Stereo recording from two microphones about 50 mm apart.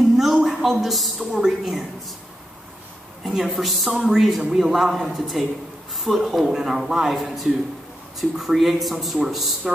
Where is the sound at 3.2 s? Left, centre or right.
Centre.